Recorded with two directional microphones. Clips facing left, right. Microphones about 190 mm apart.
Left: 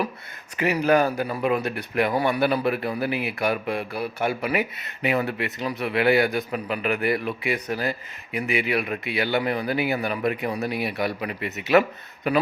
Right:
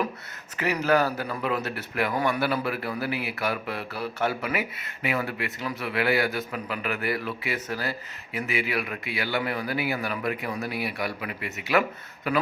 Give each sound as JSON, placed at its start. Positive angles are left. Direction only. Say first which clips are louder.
{"t": 0.5, "sound": "a man's voice", "louder": "left 3 dB", "side_deg": 15}